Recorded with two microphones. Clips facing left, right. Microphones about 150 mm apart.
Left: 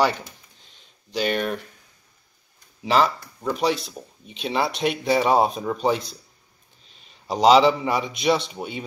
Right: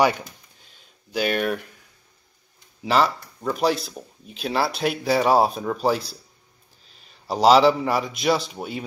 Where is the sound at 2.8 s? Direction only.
Centre (ahead or behind).